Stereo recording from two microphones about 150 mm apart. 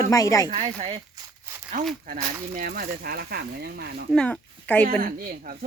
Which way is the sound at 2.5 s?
85° right.